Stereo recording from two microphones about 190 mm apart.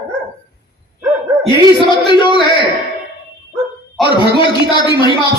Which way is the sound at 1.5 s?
25° left (ahead or behind).